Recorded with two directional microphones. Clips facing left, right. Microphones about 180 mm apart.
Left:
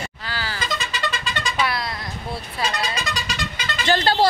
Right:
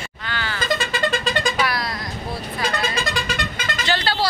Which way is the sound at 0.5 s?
55° right (ahead or behind).